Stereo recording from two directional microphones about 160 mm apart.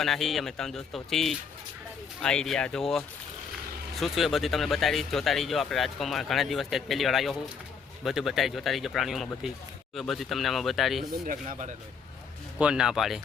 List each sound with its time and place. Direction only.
0.0 s speech: centre (ahead or behind)
11.3 s speech: 50° right (ahead or behind)
12.5 s speech: 5° right (ahead or behind)